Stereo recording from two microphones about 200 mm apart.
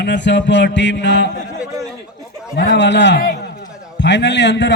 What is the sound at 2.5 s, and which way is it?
A man's voice, 60° left (ahead or behind).